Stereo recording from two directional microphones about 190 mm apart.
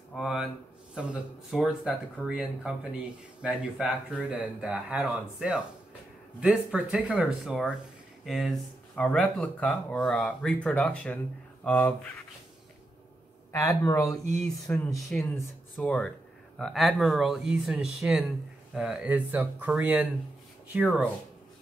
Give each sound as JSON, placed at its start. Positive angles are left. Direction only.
{"t": 0.1, "sound": "speech", "side_deg": 0}
{"t": 1.5, "sound": "speech", "side_deg": -5}
{"t": 13.5, "sound": "speech", "side_deg": 15}
{"t": 15.0, "sound": "speech", "side_deg": 0}